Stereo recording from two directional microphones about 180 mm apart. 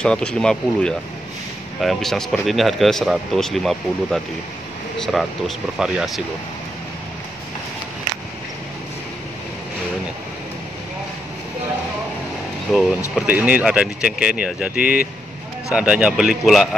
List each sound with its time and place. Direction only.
0.0 s speech: 5° left (ahead or behind)
12.7 s speech: 5° left (ahead or behind)
13.1 s speech: 10° right (ahead or behind)